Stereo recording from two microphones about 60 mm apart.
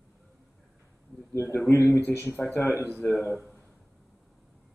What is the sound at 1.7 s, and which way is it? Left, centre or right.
Speech, left.